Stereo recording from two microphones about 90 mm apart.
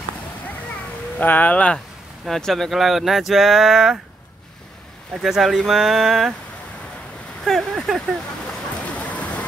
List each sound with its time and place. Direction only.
1.1 s speech: 20° left (ahead or behind)
2.2 s speech: 5° left (ahead or behind)
5.1 s speech: centre (ahead or behind)
7.4 s speech: centre (ahead or behind)
8.8 s a sound: 15° left (ahead or behind)